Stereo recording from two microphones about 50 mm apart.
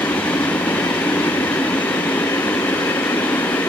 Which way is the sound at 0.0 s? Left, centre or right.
Left.